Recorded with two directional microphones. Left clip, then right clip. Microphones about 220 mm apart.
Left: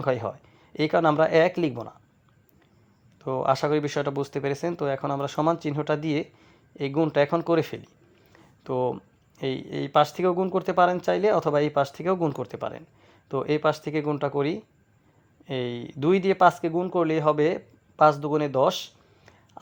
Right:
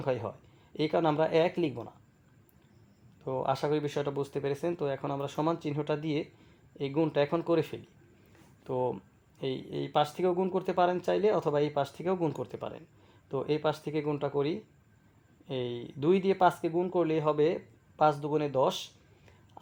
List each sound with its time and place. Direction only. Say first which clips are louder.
0.0 s speech: left 6 dB; 20° left (ahead or behind)
3.2 s speech: left 7 dB; 20° left (ahead or behind)